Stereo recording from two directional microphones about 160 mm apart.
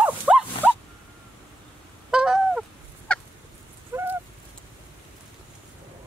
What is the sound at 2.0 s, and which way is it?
Goose, 5° right (ahead or behind).